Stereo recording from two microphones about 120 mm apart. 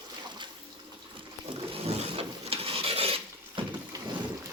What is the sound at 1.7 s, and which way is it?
Filing, 55° right (ahead or behind).